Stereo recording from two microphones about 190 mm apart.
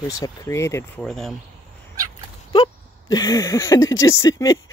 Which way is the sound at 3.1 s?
20° left (ahead or behind).